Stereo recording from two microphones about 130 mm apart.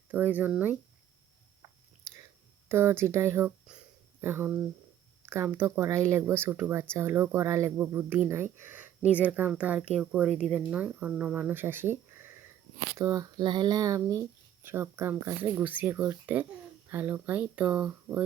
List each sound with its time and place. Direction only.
0.1 s speech: 15° right (ahead or behind)
2.1 s a sound: 25° right (ahead or behind)
2.6 s speech: 20° right (ahead or behind)